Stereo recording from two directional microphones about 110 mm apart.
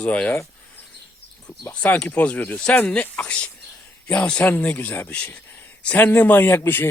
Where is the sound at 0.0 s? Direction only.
10° left (ahead or behind).